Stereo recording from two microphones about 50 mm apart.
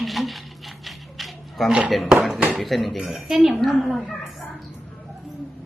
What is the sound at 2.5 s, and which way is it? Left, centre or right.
A woman's voice, centre.